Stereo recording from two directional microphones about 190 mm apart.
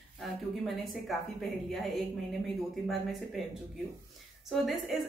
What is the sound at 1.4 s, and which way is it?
Speech, centre (ahead or behind).